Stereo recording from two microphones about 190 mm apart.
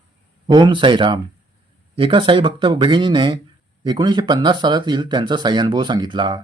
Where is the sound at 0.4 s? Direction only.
25° right (ahead or behind).